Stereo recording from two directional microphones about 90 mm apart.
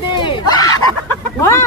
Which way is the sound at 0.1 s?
60° left (ahead or behind).